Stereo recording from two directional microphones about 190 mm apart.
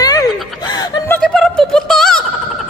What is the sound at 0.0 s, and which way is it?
Gasp, 20° left (ahead or behind).